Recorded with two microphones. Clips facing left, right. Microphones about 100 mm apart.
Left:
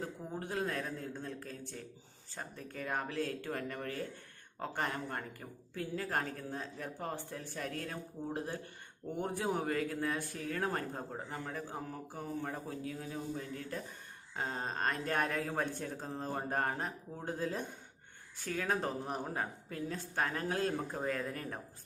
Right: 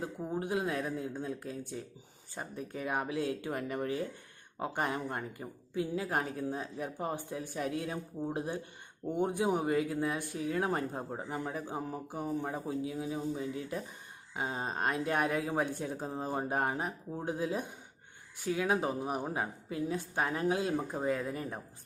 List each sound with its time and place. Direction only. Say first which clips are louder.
0.0 s speech: right 5 dB; 15° right (ahead or behind)